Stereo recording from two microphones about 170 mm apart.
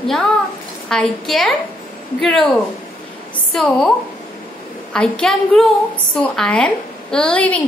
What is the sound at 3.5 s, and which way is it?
Speech, centre (ahead or behind).